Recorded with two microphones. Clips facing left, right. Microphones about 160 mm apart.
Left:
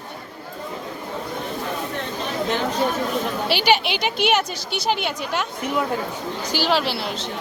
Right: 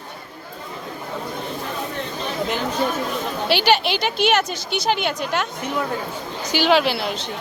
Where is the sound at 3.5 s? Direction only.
10° left (ahead or behind).